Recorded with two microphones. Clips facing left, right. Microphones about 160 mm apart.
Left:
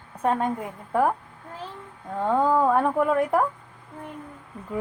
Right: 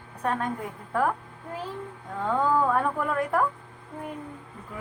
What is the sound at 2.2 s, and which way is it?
Speech, 25° left (ahead or behind).